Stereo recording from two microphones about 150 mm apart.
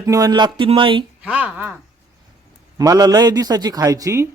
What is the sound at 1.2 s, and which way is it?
Speech, 10° right (ahead or behind).